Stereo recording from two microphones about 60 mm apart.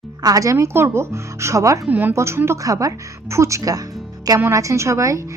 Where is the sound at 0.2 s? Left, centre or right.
Right.